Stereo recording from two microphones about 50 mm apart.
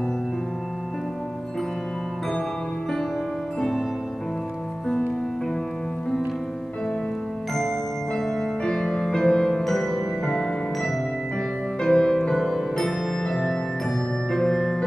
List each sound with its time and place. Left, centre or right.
8.2 s music: centre